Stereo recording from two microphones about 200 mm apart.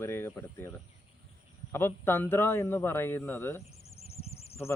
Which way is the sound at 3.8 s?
30° left (ahead or behind).